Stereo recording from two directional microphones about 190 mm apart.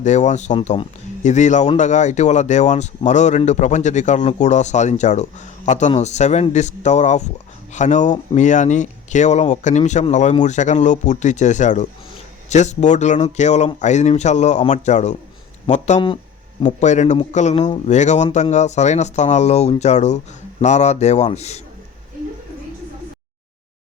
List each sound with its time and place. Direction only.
0.0 s speech: 40° left (ahead or behind)